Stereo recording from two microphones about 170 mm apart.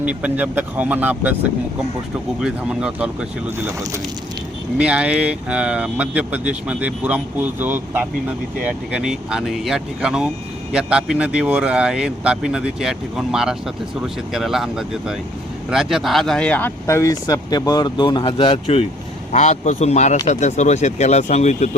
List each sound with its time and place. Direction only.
0.0 s speech: 10° right (ahead or behind)
2.4 s speech: 5° right (ahead or behind); by 21.8 s 40° left (ahead or behind)